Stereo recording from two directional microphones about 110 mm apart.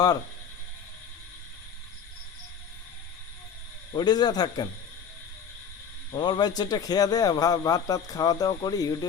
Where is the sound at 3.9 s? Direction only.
40° left (ahead or behind).